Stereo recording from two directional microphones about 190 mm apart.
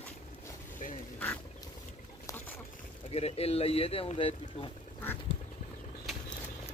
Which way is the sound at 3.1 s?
30° left (ahead or behind).